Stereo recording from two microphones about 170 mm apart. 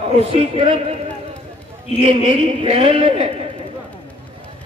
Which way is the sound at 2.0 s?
35° right (ahead or behind).